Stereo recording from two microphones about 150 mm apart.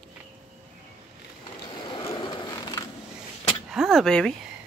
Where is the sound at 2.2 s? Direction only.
30° left (ahead or behind).